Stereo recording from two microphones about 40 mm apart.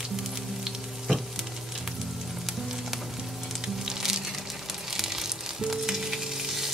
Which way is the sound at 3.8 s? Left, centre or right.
Centre.